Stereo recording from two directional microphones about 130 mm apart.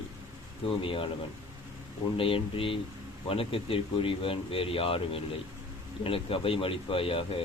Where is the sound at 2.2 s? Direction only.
45° left (ahead or behind).